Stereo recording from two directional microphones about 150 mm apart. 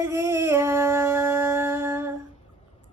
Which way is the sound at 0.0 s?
20° right (ahead or behind).